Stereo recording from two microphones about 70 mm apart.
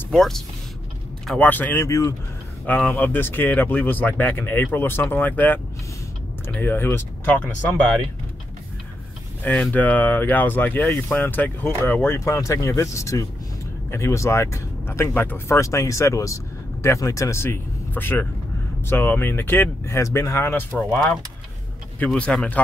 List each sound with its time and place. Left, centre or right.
0.1 s speech: centre
1.4 s speech: left
1.8 s speech: left
2.6 s speech: left
6.6 s speech: left
7.2 s speech: left
9.4 s speech: left
12.3 s speech: left
22.0 s speech: centre